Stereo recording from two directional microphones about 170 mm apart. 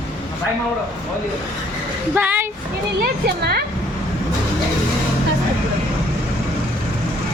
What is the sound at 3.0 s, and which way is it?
Speech, 65° right (ahead or behind).